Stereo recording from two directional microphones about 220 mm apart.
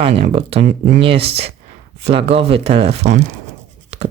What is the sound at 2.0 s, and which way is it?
Speech, 25° right (ahead or behind).